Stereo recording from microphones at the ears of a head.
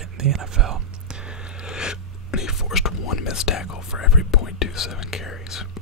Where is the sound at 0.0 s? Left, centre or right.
Right.